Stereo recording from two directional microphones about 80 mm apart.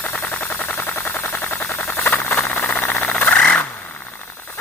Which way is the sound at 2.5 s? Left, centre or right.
Left.